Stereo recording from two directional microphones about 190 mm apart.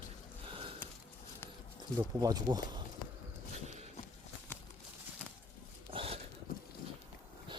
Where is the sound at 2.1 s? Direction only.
20° right (ahead or behind).